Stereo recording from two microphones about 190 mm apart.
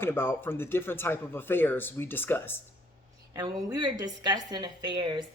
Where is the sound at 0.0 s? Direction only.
10° left (ahead or behind).